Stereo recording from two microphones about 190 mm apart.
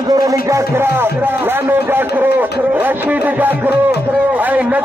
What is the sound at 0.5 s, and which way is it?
A man's voice, 15° right (ahead or behind).